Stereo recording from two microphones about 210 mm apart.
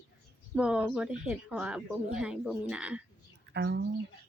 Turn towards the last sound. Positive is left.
turn(degrees=-55)  # may be behind; listen again after turning